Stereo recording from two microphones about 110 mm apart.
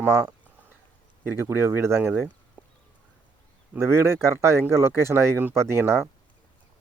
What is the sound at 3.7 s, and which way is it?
Speech, 20° right (ahead or behind).